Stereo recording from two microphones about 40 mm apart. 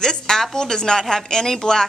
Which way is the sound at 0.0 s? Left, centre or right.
Centre.